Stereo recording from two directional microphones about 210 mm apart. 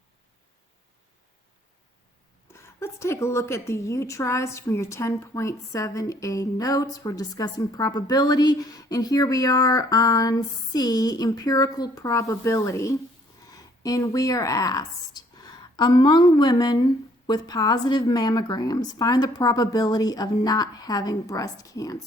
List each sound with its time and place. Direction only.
2.5 s a woman's voice: 10° left (ahead or behind)